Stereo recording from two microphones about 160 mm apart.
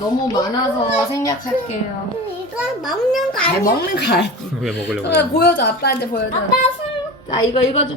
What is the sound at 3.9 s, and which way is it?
Music, 90° left.